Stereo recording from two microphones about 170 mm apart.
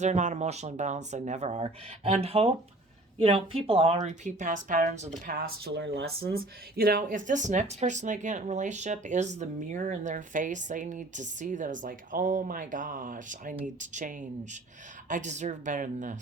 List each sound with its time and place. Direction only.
0.0 s speech: 45° right (ahead or behind)